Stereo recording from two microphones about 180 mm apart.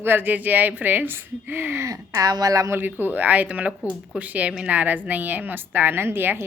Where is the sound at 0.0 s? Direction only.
10° right (ahead or behind).